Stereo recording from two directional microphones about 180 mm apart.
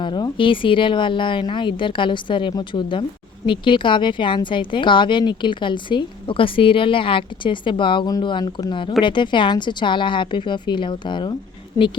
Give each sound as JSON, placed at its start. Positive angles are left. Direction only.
{"t": 0.0, "sound": "a woman's voice", "side_deg": 25}